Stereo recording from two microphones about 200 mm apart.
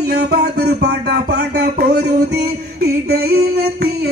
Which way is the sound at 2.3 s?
50° right (ahead or behind).